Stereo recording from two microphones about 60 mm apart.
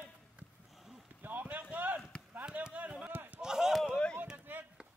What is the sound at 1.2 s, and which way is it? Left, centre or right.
Run, right.